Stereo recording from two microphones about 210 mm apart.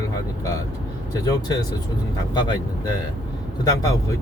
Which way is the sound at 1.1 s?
15° left (ahead or behind).